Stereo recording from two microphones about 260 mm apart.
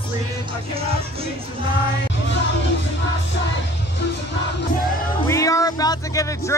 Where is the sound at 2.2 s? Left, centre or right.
Left.